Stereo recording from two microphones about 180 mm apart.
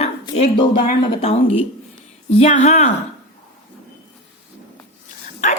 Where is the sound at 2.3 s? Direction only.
35° left (ahead or behind).